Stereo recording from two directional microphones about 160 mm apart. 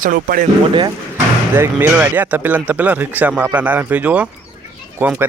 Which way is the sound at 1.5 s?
15° right (ahead or behind).